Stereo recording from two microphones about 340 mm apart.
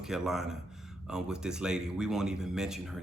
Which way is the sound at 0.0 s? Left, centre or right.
Centre.